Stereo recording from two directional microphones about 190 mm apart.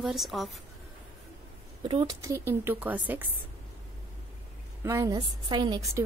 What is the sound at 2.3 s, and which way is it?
Speech, 15° right (ahead or behind).